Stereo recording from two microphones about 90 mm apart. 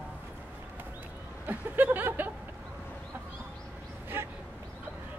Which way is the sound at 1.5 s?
20° right (ahead or behind).